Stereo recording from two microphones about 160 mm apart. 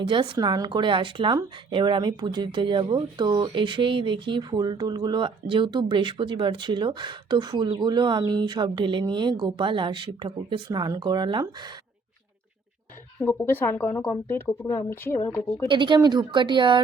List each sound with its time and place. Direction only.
0.0 s speech: 30° right (ahead or behind)
13.2 s speech: 15° left (ahead or behind)
15.6 s speech: 30° right (ahead or behind)